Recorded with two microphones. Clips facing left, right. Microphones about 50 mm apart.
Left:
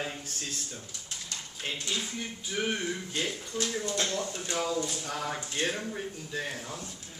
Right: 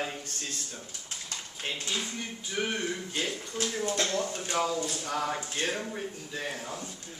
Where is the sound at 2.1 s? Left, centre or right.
Centre.